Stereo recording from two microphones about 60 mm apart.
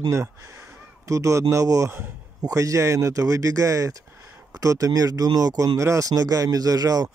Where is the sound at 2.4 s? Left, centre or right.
Right.